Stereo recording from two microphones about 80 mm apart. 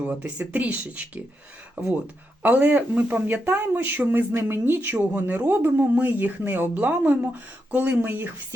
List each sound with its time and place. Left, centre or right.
0.0 s speech: centre